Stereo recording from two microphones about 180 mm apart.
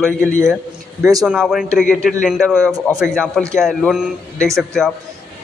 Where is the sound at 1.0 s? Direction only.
20° right (ahead or behind).